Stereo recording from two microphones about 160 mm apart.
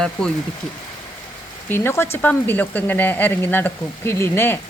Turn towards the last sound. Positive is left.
turn(degrees=15)  # may be behind; listen again after turning